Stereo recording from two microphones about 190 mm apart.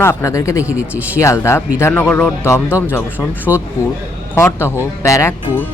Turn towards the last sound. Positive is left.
turn(degrees=15)  # may be behind; listen again after turning